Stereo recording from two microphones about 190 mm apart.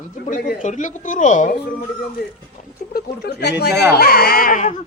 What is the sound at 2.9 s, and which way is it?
Speech, 60° left (ahead or behind).